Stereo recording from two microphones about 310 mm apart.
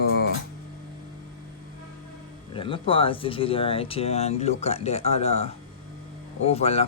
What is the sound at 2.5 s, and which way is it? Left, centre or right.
Speech, centre.